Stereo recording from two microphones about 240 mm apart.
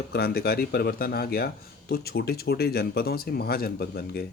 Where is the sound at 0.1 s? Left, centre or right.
Left.